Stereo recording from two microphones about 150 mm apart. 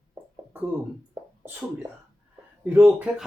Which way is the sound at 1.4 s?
15° right (ahead or behind).